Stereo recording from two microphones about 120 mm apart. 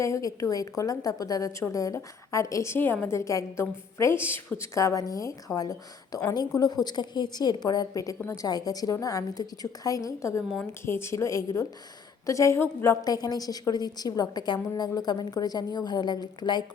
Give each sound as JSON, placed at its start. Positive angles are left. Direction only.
{"t": 0.0, "sound": "a woman's voice", "side_deg": 30}
{"t": 13.1, "sound": "a woman's voice", "side_deg": 35}